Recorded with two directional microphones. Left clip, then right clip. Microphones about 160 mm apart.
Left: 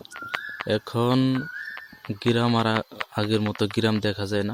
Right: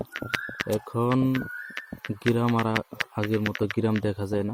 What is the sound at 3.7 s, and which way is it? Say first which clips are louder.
Speech: left 3 dB; 10° right (ahead or behind).